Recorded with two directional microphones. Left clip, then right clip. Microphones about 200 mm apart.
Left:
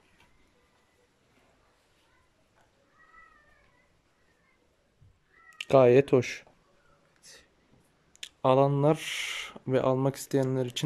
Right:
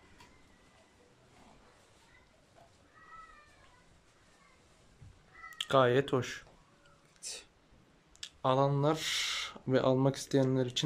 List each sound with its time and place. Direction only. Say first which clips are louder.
5.6 s speech: left 7 dB; 15° left (ahead or behind)
8.2 s speech: left 6 dB; 15° left (ahead or behind)